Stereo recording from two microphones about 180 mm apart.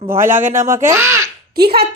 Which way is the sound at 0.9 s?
15° right (ahead or behind).